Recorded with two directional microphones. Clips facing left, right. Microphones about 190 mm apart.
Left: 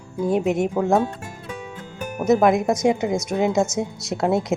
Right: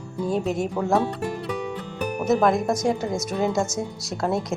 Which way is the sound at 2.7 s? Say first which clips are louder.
Left 4 dB; 20° left (ahead or behind).